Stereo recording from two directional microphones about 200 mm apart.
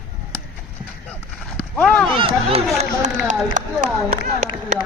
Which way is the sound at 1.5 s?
5° left (ahead or behind).